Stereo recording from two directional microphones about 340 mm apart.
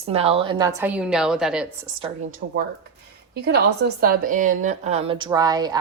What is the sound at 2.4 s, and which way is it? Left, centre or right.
A woman's voice, right.